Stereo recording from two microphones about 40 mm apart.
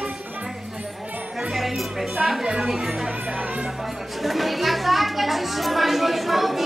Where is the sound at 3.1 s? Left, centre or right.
Right.